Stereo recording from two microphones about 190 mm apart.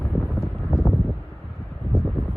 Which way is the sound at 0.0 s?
Centre (ahead or behind).